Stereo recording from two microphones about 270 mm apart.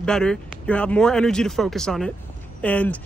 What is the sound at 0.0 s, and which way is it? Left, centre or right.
Speech, centre.